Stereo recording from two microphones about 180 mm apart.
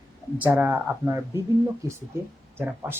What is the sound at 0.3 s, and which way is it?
Speech, 10° right (ahead or behind).